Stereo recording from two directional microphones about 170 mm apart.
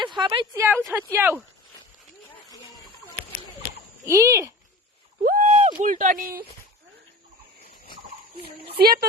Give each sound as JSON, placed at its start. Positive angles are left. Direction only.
{"t": 0.2, "sound": "speech", "side_deg": -25}
{"t": 4.0, "sound": "speech", "side_deg": -20}
{"t": 5.2, "sound": "speech", "side_deg": -55}
{"t": 8.4, "sound": "speech", "side_deg": -65}